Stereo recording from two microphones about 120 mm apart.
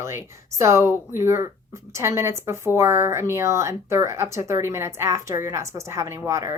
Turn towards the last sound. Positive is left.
turn(degrees=-25)  # may be behind; listen again after turning